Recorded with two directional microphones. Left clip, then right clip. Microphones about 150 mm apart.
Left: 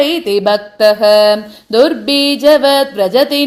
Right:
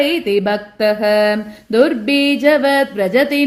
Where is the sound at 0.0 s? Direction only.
10° left (ahead or behind).